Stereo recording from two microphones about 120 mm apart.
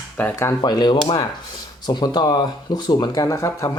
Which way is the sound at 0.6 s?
40° left (ahead or behind).